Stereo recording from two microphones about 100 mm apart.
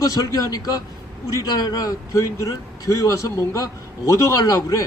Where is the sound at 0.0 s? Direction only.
35° left (ahead or behind).